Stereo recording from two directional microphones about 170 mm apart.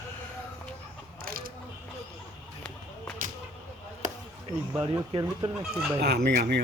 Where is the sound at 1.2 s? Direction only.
60° right (ahead or behind).